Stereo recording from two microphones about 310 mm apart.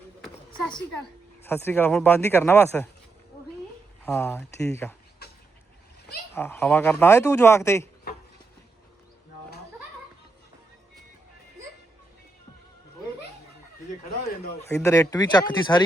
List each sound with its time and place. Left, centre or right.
1.5 s speech: centre
4.0 s speech: centre
6.3 s speech: centre
14.3 s speech: left
14.7 s speech: centre